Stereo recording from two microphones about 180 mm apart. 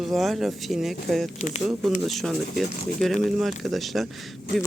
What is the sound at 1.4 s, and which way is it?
Speech, 40° left (ahead or behind).